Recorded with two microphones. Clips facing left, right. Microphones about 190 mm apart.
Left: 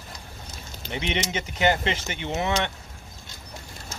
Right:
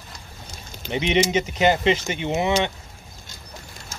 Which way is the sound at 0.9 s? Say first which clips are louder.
Right 8 dB; 20° right (ahead or behind).